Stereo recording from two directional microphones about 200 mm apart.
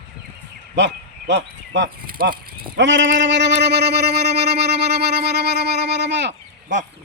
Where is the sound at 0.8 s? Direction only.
60° right (ahead or behind).